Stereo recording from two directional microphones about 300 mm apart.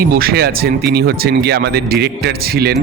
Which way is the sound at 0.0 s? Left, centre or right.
Right.